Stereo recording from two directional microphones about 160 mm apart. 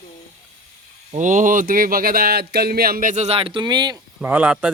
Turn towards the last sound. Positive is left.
turn(degrees=-5)  # may be behind; listen again after turning